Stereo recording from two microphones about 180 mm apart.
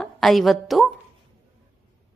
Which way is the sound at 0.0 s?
Centre (ahead or behind).